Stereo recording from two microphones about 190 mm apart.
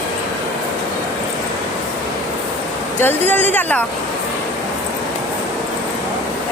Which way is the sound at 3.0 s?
10° left (ahead or behind).